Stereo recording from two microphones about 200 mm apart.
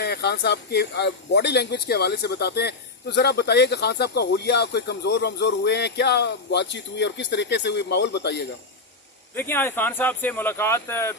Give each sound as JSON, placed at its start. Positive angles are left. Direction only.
{"t": 0.0, "sound": "speech", "side_deg": 55}
{"t": 9.3, "sound": "speech", "side_deg": 10}